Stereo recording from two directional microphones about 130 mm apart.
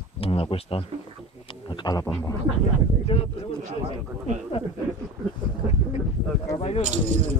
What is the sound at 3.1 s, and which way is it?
Speech, 50° left (ahead or behind).